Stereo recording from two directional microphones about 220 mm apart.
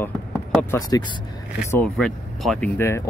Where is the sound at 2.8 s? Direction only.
10° left (ahead or behind).